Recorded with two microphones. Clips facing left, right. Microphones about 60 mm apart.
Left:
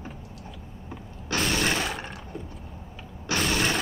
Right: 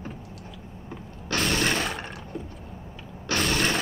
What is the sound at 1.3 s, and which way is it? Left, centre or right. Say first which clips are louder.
Breaking: right 1 dB; centre.